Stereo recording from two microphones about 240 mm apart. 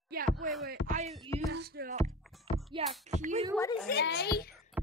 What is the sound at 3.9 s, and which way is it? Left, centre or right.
Speech, left.